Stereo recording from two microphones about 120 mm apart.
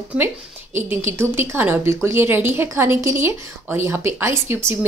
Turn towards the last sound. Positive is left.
turn(degrees=-20)  # may be behind; listen again after turning